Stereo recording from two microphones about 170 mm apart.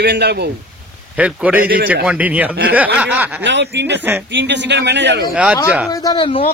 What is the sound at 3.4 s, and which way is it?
Speech, 90° right.